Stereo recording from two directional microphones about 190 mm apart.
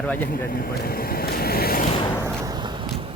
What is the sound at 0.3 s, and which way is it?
Vehicle, 50° left (ahead or behind).